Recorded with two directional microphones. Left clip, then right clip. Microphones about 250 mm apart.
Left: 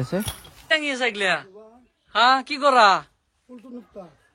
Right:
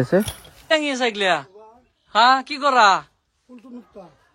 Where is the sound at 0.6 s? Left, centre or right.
Centre.